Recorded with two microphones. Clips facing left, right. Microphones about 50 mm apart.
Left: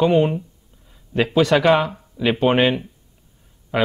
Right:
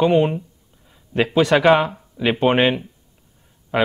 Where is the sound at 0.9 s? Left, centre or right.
Centre.